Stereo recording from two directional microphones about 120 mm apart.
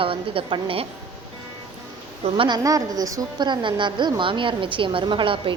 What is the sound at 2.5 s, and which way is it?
A woman's voice, 30° right (ahead or behind).